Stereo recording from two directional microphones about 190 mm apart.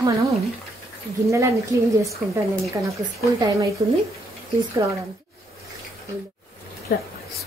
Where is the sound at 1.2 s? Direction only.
15° right (ahead or behind).